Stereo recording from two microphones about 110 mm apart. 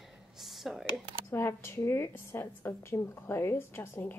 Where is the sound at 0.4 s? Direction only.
Centre (ahead or behind).